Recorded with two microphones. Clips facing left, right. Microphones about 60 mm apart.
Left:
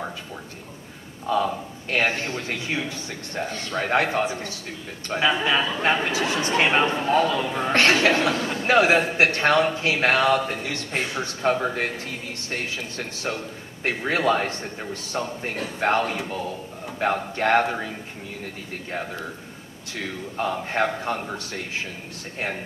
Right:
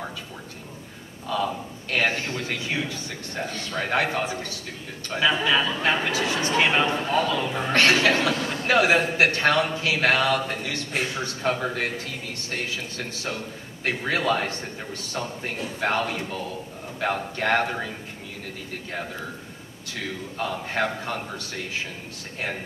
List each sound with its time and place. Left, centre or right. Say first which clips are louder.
1.3 s a man's voice: left 3 dB; left
3.4 s a man's voice: left 2 dB; centre
3.8 s a man's voice: left 3 dB; left
19.9 s a man's voice: left 1 dB; left